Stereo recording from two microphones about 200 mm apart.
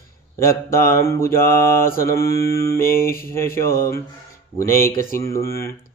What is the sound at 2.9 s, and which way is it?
Mantra, 45° left (ahead or behind).